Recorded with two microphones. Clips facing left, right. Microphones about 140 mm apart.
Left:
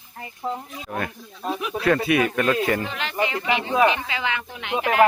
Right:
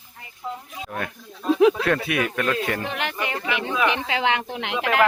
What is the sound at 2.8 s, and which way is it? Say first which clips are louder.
Speech: left 2 dB; 60° right (ahead or behind).